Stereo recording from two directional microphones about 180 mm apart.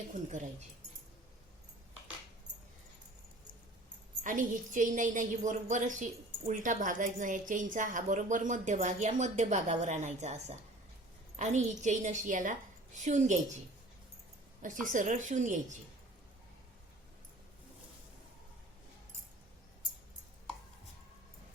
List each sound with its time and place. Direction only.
0.1 s speech: 45° right (ahead or behind)
4.2 s a woman's voice: 45° right (ahead or behind)
14.6 s a woman's voice: 45° right (ahead or behind)